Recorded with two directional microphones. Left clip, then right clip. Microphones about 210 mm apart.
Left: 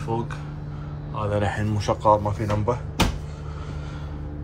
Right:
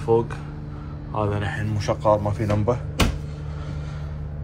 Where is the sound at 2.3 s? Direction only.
Centre (ahead or behind).